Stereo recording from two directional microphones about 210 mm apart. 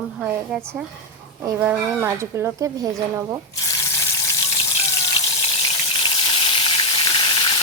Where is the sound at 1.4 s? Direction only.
10° right (ahead or behind).